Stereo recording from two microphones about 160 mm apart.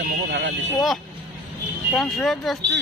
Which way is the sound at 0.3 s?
90° right.